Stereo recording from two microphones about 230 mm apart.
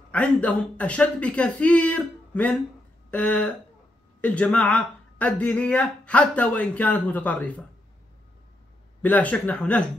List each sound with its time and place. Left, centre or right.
0.1 s speech: centre
9.0 s speech: centre